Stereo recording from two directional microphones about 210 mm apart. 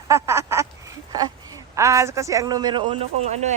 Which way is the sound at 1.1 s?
20° right (ahead or behind).